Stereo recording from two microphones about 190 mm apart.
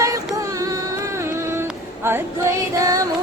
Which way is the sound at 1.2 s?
15° right (ahead or behind).